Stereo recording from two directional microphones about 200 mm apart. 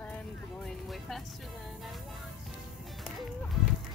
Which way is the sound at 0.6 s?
Centre (ahead or behind).